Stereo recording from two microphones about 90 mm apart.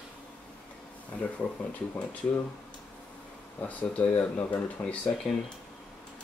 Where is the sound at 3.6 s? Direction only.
15° left (ahead or behind).